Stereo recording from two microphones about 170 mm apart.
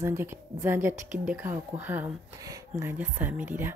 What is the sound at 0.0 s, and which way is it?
Speech, 15° right (ahead or behind).